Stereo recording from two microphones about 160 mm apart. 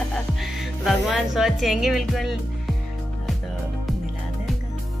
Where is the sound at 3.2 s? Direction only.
Centre (ahead or behind).